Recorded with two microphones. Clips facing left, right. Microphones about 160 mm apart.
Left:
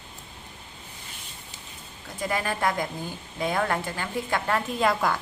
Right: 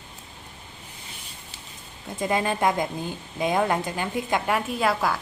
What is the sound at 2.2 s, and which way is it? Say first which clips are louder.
A woman's voice: right 4 dB; 20° right (ahead or behind).